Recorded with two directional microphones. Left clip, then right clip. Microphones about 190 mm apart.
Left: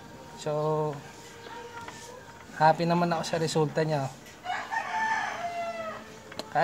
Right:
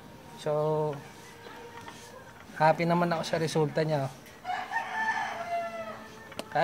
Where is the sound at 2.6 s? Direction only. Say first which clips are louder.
Left 1 dB; 20° right (ahead or behind).